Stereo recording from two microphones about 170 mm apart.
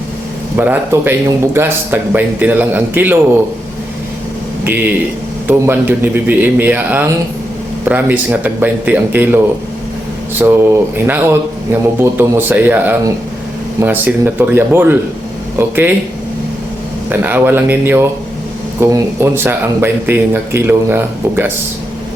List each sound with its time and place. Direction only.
0.5 s speech: 10° right (ahead or behind)
4.6 s speech: 10° right (ahead or behind)
10.4 s speech: 15° right (ahead or behind)
17.1 s speech: 10° right (ahead or behind)